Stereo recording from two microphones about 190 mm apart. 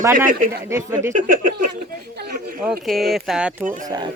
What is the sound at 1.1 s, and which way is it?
Speech, 45° right (ahead or behind).